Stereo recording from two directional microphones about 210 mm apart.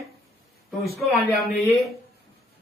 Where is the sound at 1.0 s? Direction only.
Centre (ahead or behind).